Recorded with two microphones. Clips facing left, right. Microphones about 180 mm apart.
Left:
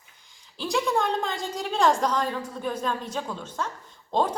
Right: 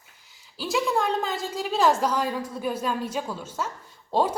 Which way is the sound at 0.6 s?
5° right (ahead or behind).